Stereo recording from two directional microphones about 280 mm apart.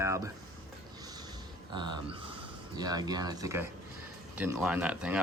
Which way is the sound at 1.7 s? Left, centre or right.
Centre.